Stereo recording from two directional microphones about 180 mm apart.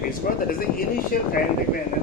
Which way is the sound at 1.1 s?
55° left (ahead or behind).